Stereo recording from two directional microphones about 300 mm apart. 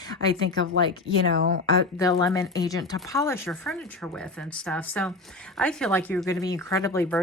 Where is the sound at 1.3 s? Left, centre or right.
Right.